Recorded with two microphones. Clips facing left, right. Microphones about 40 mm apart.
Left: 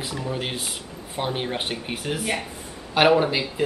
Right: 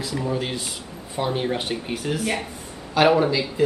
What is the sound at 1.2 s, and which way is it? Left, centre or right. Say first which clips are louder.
Speech: right 2 dB; left.